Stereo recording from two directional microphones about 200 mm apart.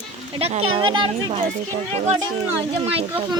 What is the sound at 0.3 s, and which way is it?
Speech, 30° right (ahead or behind).